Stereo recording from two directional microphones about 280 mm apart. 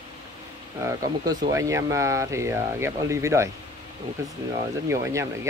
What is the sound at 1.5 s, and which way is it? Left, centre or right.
Speech, centre.